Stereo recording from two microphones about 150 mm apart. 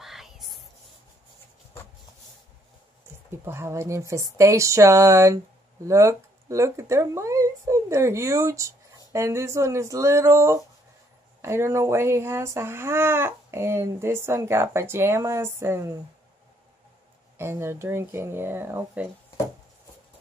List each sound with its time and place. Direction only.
0.0 s whispering: centre (ahead or behind)
3.3 s speech: 15° right (ahead or behind)
17.4 s speech: 15° right (ahead or behind)